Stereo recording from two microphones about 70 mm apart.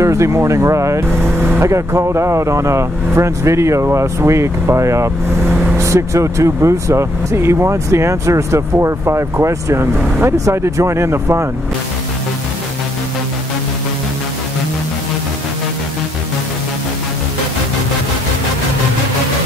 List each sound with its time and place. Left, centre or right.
0.0 s speech: right